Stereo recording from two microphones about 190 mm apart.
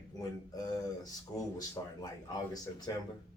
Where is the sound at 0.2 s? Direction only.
20° left (ahead or behind).